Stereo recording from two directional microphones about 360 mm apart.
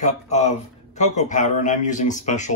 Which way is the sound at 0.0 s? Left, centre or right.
Centre.